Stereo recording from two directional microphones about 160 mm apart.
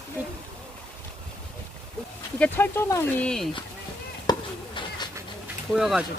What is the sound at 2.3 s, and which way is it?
Speech, 10° left (ahead or behind).